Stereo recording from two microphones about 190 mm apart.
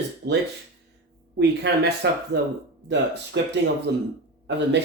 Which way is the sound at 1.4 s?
60° right (ahead or behind).